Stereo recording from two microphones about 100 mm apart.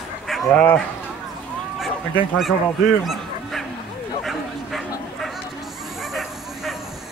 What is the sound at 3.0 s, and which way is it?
Dog, centre (ahead or behind).